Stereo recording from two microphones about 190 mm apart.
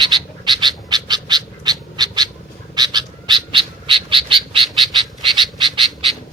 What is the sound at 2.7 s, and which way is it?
Frog, 20° right (ahead or behind).